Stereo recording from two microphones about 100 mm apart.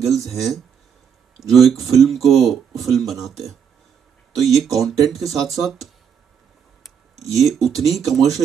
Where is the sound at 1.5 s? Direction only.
Centre (ahead or behind).